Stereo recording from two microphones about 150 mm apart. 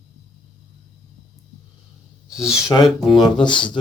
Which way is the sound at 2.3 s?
5° right (ahead or behind).